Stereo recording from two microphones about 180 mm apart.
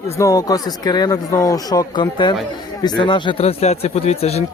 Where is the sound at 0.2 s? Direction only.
20° left (ahead or behind).